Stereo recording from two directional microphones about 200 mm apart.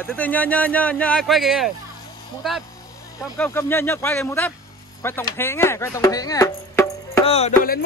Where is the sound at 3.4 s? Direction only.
10° left (ahead or behind).